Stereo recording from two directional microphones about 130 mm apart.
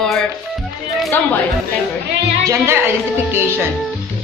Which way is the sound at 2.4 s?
20° right (ahead or behind).